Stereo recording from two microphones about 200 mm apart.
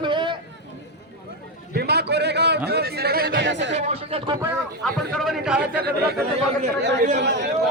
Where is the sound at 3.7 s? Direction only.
30° right (ahead or behind).